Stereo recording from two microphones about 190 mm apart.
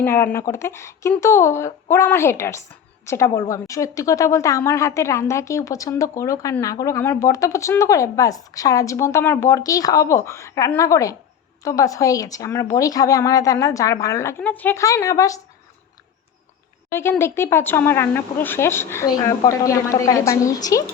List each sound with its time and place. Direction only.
0.0 s a woman's voice: 10° left (ahead or behind)
16.9 s a woman's voice: 10° left (ahead or behind)